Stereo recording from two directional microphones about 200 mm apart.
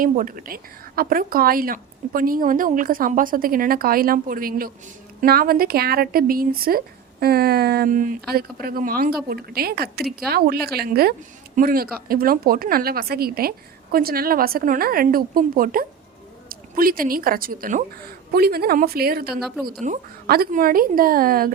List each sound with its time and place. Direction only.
0.0 s speech: 45° right (ahead or behind)
19.4 s a woman's voice: centre (ahead or behind)
19.8 s speech: 45° right (ahead or behind)